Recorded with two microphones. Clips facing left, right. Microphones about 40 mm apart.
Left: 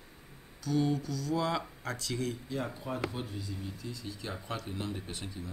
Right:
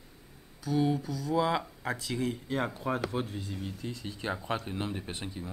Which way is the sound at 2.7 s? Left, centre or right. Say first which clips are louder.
Right 4 dB; right.